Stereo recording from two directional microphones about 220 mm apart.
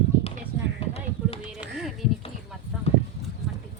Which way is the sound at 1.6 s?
Centre (ahead or behind).